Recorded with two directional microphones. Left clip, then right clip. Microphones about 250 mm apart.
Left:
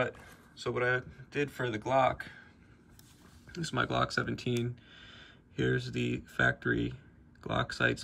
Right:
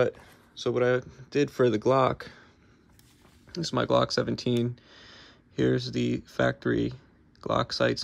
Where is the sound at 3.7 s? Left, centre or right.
Centre.